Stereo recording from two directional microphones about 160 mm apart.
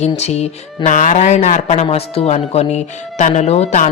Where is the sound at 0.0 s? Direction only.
40° left (ahead or behind).